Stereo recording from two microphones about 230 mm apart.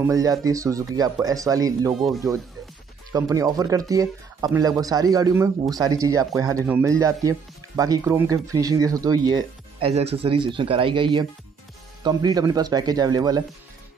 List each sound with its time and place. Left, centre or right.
0.0 s speech: centre
3.1 s speech: centre
9.8 s speech: right